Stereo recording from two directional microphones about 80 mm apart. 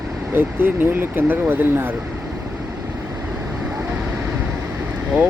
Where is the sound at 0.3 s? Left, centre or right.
Right.